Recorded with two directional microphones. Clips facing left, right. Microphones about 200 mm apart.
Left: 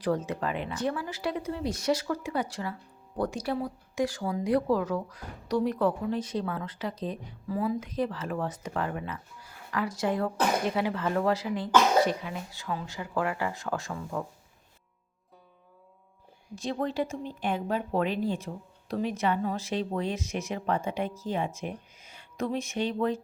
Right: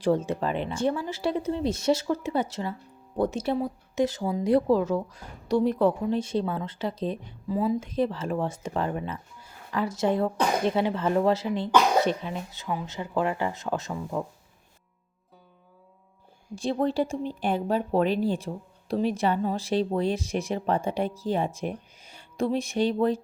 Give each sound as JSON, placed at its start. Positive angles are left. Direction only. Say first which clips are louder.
{"t": 0.0, "sound": "speech", "louder": "right 4 dB", "side_deg": -25}
{"t": 16.6, "sound": "speech", "louder": "right 5 dB", "side_deg": -30}